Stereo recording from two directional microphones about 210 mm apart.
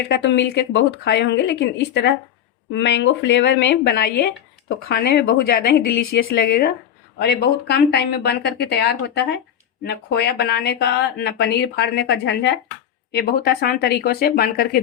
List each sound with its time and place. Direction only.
0.1 s speech: 55° left (ahead or behind)